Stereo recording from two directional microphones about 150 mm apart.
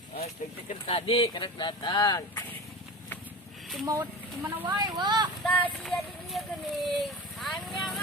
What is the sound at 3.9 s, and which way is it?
Speech, 20° right (ahead or behind).